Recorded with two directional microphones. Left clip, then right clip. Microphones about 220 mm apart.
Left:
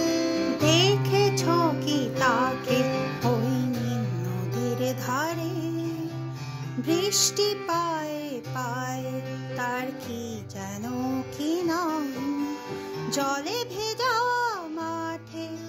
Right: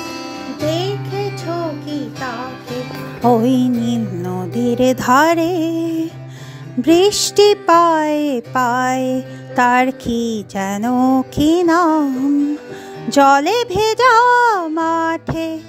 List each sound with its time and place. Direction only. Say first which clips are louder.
0.7 s music: right 2 dB; centre (ahead or behind)
3.3 s music: right 16 dB; 40° right (ahead or behind)
6.8 s music: right 12 dB; 40° right (ahead or behind)
13.1 s music: right 17 dB; 40° right (ahead or behind)